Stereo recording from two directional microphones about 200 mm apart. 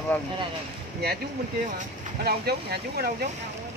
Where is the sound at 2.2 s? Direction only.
50° right (ahead or behind).